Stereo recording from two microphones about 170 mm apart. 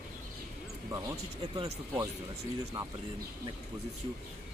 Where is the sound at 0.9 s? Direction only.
25° right (ahead or behind).